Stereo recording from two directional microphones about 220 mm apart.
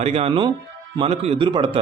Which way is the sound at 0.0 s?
30° right (ahead or behind).